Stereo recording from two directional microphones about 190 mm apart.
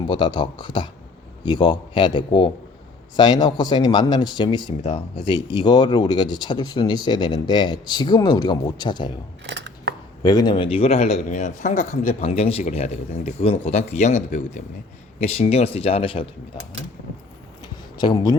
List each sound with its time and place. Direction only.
0.0 s speech: 25° left (ahead or behind)
9.5 s scissors: 65° right (ahead or behind)
10.2 s speech: 20° left (ahead or behind)
18.0 s speech: 20° left (ahead or behind)